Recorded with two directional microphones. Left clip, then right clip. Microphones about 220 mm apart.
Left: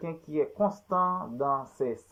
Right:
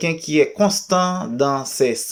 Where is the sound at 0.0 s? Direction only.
15° right (ahead or behind).